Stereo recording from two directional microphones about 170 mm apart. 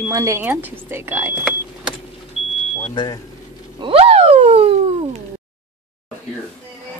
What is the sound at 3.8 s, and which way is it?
Speech, 35° right (ahead or behind).